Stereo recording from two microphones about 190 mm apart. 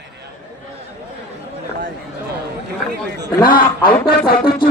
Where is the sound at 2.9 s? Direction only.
60° right (ahead or behind).